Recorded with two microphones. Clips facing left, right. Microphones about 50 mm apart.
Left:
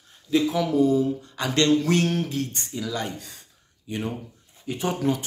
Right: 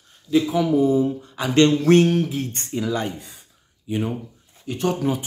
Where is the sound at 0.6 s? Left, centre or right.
Centre.